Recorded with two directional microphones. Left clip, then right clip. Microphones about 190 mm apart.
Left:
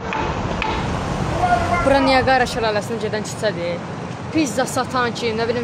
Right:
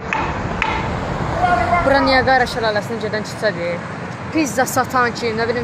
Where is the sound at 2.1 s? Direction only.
10° left (ahead or behind).